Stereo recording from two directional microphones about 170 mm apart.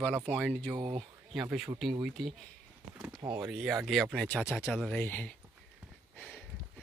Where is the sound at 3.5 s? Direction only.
Centre (ahead or behind).